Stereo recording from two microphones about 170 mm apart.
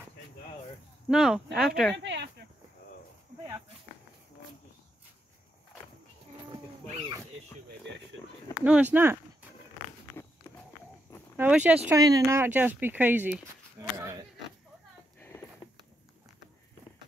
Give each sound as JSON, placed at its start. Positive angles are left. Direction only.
{"t": 1.0, "sound": "speech", "side_deg": -5}
{"t": 2.0, "sound": "a sound", "side_deg": -90}
{"t": 8.2, "sound": "a sound", "side_deg": 20}
{"t": 8.6, "sound": "speech", "side_deg": -10}
{"t": 11.3, "sound": "speech", "side_deg": -10}
{"t": 12.0, "sound": "speech", "side_deg": -20}